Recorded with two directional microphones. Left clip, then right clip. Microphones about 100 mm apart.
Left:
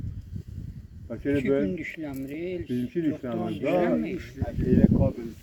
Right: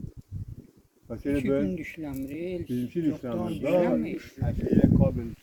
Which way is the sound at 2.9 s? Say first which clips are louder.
Even; 35° right (ahead or behind).